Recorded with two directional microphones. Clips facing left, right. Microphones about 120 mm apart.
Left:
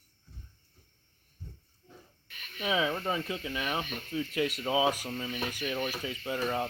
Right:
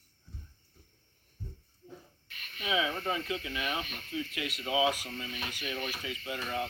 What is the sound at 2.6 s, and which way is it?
Speech, 35° left (ahead or behind).